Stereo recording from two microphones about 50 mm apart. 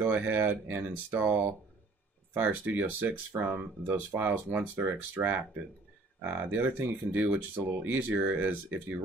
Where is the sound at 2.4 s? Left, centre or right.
Right.